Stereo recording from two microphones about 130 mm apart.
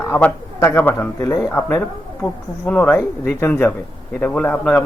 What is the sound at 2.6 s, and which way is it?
A man's voice, 10° left (ahead or behind).